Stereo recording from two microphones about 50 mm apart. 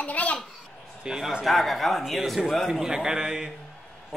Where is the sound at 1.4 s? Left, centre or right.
Centre.